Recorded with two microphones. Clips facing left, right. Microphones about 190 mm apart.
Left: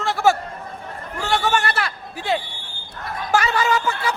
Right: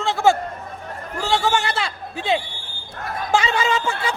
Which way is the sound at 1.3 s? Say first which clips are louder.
Even; 25° right (ahead or behind).